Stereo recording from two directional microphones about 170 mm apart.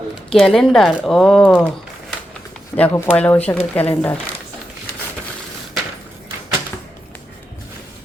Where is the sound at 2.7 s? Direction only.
10° left (ahead or behind).